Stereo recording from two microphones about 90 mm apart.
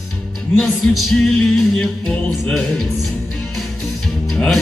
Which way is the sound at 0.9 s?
Centre (ahead or behind).